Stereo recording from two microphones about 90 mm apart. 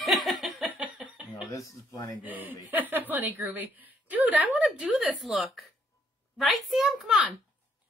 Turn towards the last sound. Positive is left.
turn(degrees=-5)  # may be behind; listen again after turning